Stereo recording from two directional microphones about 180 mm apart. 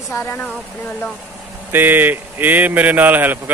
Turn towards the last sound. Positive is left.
turn(degrees=-10)  # may be behind; listen again after turning